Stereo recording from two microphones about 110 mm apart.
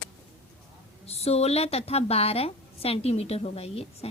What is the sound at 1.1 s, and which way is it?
A woman's voice, 70° left (ahead or behind).